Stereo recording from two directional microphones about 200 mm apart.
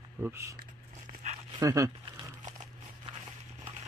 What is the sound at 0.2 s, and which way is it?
Speech, 15° right (ahead or behind).